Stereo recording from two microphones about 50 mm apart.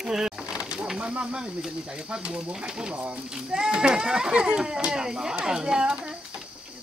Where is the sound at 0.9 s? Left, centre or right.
Right.